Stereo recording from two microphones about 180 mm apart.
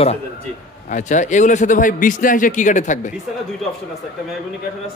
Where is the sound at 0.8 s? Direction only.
45° left (ahead or behind).